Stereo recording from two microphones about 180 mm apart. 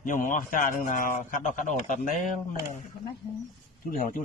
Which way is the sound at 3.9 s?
50° left (ahead or behind).